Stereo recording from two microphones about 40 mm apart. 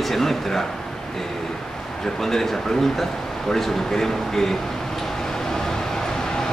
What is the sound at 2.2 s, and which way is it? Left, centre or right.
Speech, centre.